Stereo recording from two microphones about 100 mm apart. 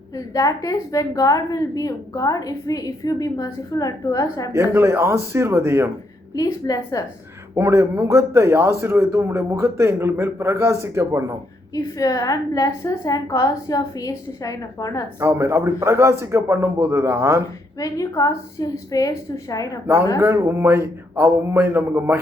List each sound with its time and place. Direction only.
0.1 s a woman's voice: 35° left (ahead or behind)
4.5 s a man's voice: 30° right (ahead or behind)
6.3 s a woman's voice: 35° left (ahead or behind)
7.5 s a man's voice: 25° right (ahead or behind)
11.9 s a woman's voice: 35° left (ahead or behind)
15.2 s a man's voice: 30° right (ahead or behind)
17.7 s a woman's voice: 35° left (ahead or behind)
20.1 s a man's voice: 30° right (ahead or behind)